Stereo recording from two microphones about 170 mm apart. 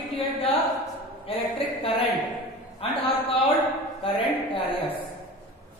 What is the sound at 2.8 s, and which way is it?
A woman's voice, 35° left (ahead or behind).